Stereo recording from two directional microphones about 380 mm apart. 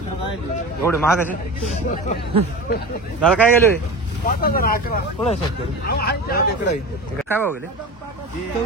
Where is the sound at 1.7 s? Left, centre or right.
Centre.